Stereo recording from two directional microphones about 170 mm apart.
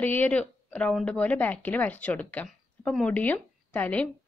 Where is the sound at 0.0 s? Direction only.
10° left (ahead or behind).